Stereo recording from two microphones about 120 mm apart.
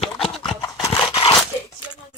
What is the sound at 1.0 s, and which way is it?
Crunch, 45° left (ahead or behind).